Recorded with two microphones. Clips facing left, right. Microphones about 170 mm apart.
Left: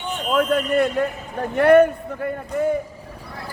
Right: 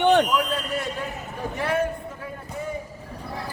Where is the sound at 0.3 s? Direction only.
60° left (ahead or behind).